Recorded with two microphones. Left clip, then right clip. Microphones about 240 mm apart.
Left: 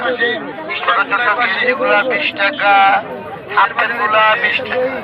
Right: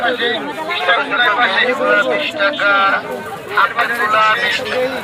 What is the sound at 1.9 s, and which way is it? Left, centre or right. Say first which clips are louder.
Speech: even; left.